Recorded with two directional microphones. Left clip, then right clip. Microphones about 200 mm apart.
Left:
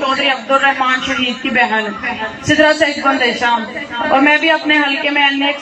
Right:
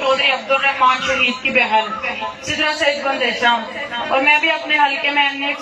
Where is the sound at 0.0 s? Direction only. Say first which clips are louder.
Left 1 dB; 35° left (ahead or behind).